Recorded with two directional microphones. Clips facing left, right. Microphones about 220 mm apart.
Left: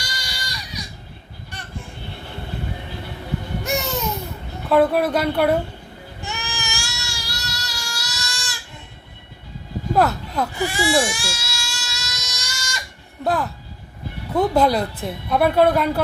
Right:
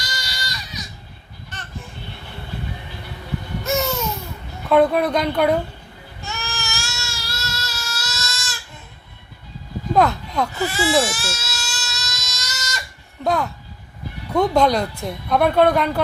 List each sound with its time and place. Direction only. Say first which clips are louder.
0.0 s a sound: right 1 dB; 15° left (ahead or behind)
1.5 s vehicle: even; 10° left (ahead or behind)
3.6 s babbling: right 4 dB; 15° left (ahead or behind)
4.7 s a woman's voice: right 1 dB; 5° left (ahead or behind)
6.2 s a sound: even; 15° left (ahead or behind)
9.9 s goat: right 1 dB; 5° left (ahead or behind)
13.2 s a woman's voice: right 1 dB; centre (ahead or behind)